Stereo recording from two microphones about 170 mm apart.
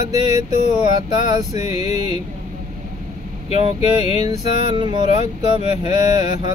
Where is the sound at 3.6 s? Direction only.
30° right (ahead or behind).